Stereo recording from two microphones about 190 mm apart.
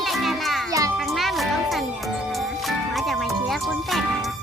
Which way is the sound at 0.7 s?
15° right (ahead or behind).